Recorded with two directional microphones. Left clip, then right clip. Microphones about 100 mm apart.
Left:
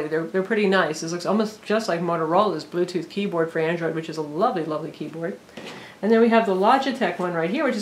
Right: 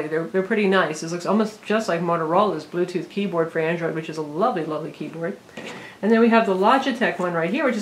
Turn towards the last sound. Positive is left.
turn(degrees=25)  # may be behind; listen again after turning